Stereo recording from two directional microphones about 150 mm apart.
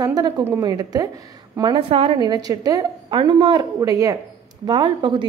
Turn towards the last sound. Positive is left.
turn(degrees=-30)  # may be behind; listen again after turning